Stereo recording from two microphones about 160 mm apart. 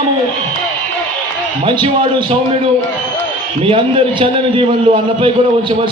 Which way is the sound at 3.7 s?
35° right (ahead or behind).